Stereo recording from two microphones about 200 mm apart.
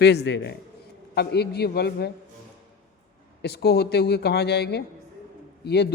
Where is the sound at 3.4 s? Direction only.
55° left (ahead or behind).